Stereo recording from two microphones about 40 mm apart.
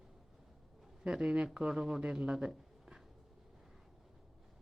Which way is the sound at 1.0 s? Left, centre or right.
Right.